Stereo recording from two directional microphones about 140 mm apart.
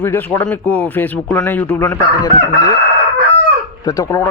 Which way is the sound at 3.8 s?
25° left (ahead or behind).